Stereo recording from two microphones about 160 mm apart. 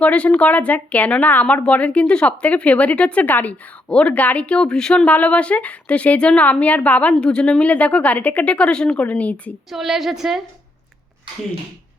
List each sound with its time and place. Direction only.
0.0 s a woman's voice: 10° left (ahead or behind)